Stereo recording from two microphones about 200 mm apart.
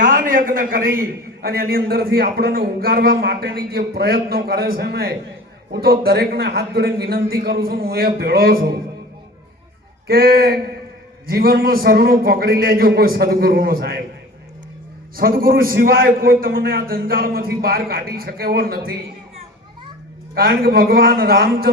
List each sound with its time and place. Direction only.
0.0 s a man's voice: 45° right (ahead or behind)
10.1 s a man's voice: 50° right (ahead or behind)
15.1 s a man's voice: 45° right (ahead or behind)
20.3 s a man's voice: 50° right (ahead or behind)